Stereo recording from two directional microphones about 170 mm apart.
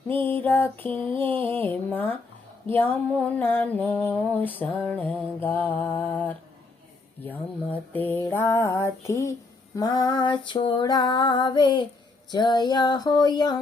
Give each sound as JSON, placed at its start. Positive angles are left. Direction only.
{"t": 0.1, "sound": "mantra", "side_deg": 10}
{"t": 9.7, "sound": "female singing", "side_deg": 25}